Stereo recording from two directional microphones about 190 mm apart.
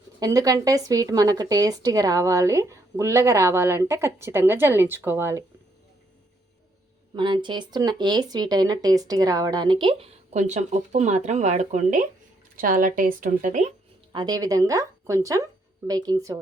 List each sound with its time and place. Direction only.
0.2 s speech: 20° right (ahead or behind)
7.1 s speech: 25° right (ahead or behind)
14.1 s speech: 20° right (ahead or behind)